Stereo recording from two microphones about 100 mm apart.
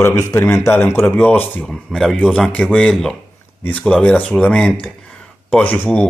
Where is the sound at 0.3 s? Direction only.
30° left (ahead or behind).